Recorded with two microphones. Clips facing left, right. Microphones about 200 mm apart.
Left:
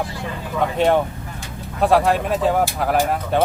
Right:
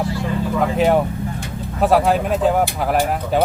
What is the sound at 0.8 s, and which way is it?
Speech, 5° right (ahead or behind).